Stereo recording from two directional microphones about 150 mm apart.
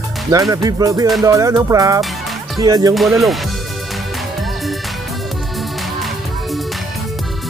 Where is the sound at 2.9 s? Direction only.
Centre (ahead or behind).